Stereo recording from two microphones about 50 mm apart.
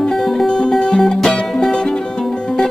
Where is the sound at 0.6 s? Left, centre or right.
Centre.